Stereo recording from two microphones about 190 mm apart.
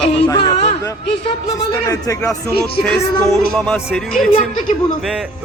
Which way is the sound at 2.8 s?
Centre (ahead or behind).